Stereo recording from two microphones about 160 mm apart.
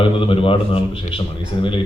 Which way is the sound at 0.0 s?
35° left (ahead or behind).